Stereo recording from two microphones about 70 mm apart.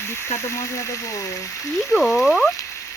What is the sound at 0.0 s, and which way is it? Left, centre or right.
Speech, left.